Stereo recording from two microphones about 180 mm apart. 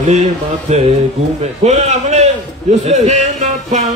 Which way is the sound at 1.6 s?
40° right (ahead or behind).